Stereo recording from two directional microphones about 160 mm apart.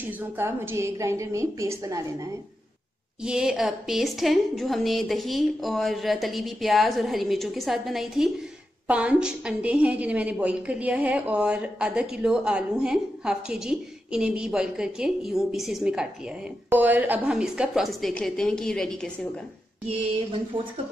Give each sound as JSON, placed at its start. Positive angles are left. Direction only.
{"t": 0.0, "sound": "a woman's voice", "side_deg": -15}
{"t": 3.3, "sound": "a woman's voice", "side_deg": -5}